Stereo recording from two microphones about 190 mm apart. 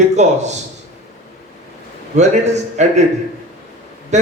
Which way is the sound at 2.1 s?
35° right (ahead or behind).